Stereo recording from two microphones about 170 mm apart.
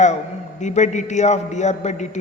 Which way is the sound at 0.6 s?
45° left (ahead or behind).